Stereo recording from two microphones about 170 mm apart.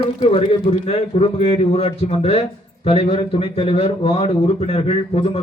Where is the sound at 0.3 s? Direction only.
35° left (ahead or behind).